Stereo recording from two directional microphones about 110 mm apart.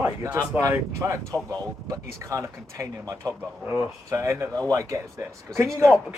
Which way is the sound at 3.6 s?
20° right (ahead or behind).